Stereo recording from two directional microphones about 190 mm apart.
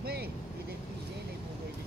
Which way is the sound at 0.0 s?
55° right (ahead or behind).